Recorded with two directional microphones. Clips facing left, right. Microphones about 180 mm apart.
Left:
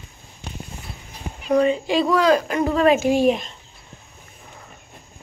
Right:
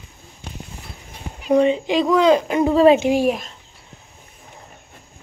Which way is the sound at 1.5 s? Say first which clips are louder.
Right 2 dB; 25° right (ahead or behind).